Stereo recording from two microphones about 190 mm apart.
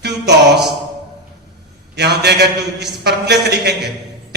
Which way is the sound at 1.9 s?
60° right (ahead or behind).